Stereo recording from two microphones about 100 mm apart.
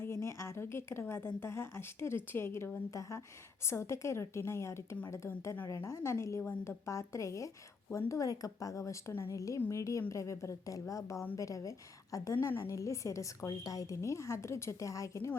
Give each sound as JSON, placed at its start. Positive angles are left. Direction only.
{"t": 0.0, "sound": "a woman's voice", "side_deg": 25}
{"t": 3.7, "sound": "a woman's voice", "side_deg": 25}
{"t": 6.4, "sound": "a woman's voice", "side_deg": 20}
{"t": 6.8, "sound": "a woman's voice", "side_deg": 30}